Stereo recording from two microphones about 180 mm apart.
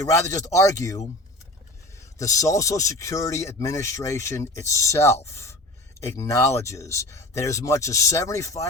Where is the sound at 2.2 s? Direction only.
20° left (ahead or behind).